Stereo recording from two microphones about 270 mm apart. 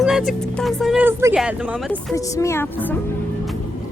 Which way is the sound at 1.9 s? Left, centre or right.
Centre.